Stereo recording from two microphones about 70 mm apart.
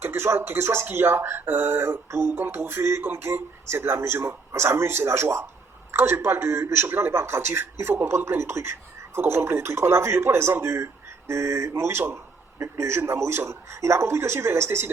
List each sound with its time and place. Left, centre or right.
0.0 s speech: right